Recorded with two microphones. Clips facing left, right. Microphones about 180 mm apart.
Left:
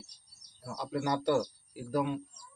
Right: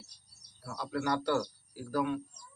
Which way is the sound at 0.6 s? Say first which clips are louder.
Left 1 dB; 20° left (ahead or behind).